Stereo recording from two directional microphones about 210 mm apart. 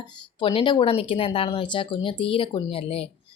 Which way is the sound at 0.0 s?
25° left (ahead or behind).